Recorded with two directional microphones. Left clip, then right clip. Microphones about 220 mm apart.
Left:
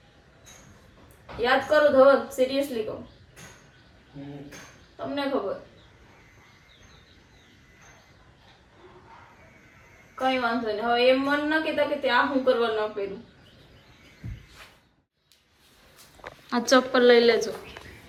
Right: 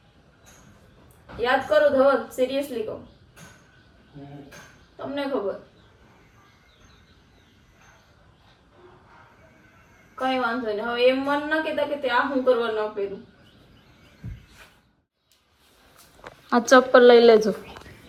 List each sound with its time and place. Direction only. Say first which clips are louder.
1.4 s a woman's voice: right 1 dB; centre (ahead or behind)
10.2 s a woman's voice: right 1 dB; 5° left (ahead or behind)
16.5 s a woman's voice: right 6 dB; centre (ahead or behind)